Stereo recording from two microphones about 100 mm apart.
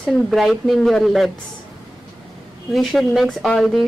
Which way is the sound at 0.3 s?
Centre (ahead or behind).